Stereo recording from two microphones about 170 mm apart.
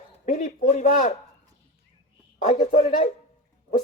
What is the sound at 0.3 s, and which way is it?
Speech, 45° left (ahead or behind).